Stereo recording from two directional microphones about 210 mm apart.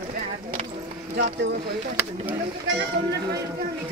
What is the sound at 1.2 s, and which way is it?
Speech, 55° right (ahead or behind).